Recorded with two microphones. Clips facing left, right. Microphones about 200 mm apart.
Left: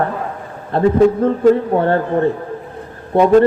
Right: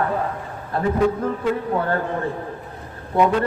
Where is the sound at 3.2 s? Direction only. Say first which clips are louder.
Left 8 dB; 40° left (ahead or behind).